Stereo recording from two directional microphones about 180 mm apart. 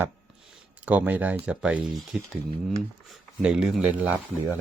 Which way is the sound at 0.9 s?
10° right (ahead or behind).